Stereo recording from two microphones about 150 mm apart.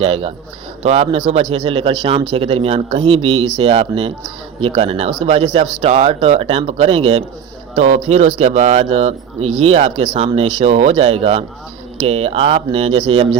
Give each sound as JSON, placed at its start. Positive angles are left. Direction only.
{"t": 0.0, "sound": "speech", "side_deg": -40}
{"t": 5.8, "sound": "speech", "side_deg": -55}
{"t": 6.1, "sound": "speech", "side_deg": -40}